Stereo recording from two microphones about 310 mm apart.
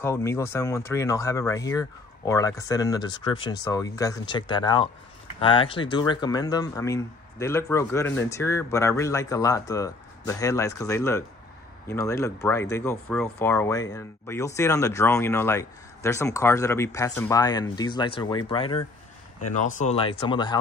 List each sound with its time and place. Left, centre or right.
0.0 s speech: centre